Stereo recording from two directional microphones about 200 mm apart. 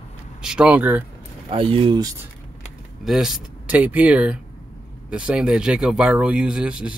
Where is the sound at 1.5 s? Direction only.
25° right (ahead or behind).